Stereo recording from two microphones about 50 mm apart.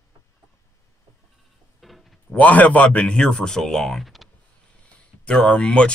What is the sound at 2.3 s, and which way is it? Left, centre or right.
Speech, left.